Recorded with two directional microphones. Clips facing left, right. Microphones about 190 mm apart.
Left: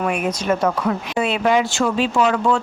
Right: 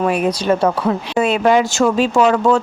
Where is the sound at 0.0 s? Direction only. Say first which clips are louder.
Right 5 dB; 35° right (ahead or behind).